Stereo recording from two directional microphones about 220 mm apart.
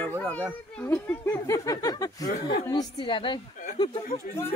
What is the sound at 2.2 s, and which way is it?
Speech, 45° left (ahead or behind).